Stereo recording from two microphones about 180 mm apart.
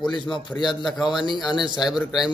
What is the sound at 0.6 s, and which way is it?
Speech, centre (ahead or behind).